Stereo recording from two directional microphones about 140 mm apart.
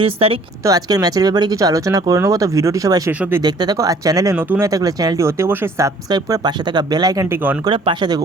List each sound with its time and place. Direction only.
0.0 s speech: 40° right (ahead or behind)
0.6 s speech: 25° right (ahead or behind)
3.1 s speech: 10° right (ahead or behind)
3.4 s speech: 30° right (ahead or behind)
4.4 s speech: 15° right (ahead or behind)
4.7 s speech: 25° right (ahead or behind)